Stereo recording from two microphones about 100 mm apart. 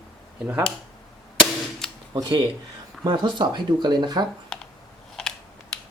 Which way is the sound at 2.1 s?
50° right (ahead or behind).